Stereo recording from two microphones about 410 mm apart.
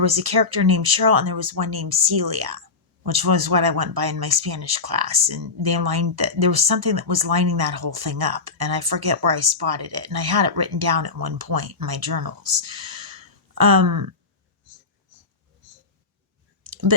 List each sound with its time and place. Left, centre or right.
0.0 s speech: right
16.6 s clicking: right